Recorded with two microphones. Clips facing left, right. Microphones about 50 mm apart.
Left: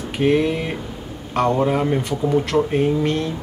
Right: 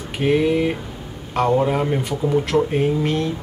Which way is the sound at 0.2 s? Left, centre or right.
Centre.